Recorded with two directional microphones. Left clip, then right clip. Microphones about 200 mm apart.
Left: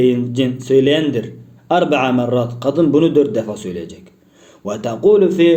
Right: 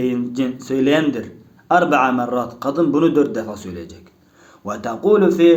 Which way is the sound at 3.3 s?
Centre (ahead or behind).